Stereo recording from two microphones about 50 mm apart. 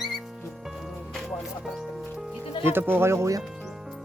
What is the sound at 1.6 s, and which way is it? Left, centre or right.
Speech, centre.